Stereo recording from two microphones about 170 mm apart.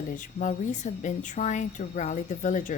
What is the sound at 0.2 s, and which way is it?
Speech, 50° left (ahead or behind).